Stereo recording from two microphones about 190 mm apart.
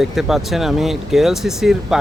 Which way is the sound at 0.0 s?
Centre (ahead or behind).